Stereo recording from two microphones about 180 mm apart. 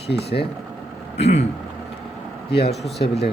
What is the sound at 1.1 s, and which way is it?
Speech, 35° left (ahead or behind).